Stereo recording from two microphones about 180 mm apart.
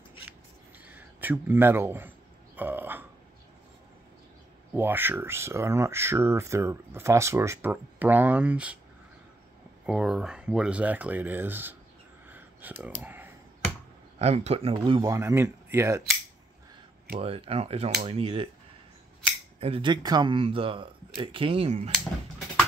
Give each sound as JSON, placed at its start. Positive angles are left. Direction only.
{"t": 0.8, "sound": "a sound", "side_deg": -10}
{"t": 4.7, "sound": "speech", "side_deg": -10}
{"t": 9.8, "sound": "speech", "side_deg": -5}
{"t": 12.3, "sound": "a sound", "side_deg": -10}
{"t": 12.8, "sound": "computer keyboard", "side_deg": -10}
{"t": 14.1, "sound": "speech", "side_deg": -35}
{"t": 14.8, "sound": "speech", "side_deg": -20}
{"t": 17.2, "sound": "speech", "side_deg": -35}
{"t": 19.6, "sound": "speech", "side_deg": -30}